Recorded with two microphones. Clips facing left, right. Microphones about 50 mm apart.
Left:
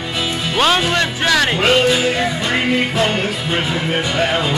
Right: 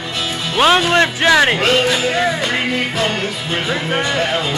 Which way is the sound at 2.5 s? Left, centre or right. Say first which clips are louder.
Left 2 dB; centre.